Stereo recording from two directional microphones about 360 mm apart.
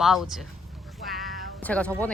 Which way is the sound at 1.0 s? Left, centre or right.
Right.